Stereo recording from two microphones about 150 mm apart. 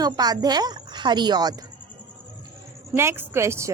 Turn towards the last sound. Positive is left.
turn(degrees=-20)  # may be behind; listen again after turning